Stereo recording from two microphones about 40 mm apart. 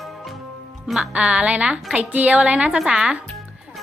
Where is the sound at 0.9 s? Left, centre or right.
Right.